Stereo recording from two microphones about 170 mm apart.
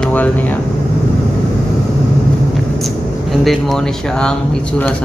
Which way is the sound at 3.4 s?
Centre (ahead or behind).